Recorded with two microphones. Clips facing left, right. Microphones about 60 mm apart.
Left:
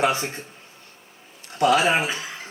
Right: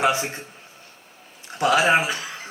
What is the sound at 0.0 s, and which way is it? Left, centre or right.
Speech, centre.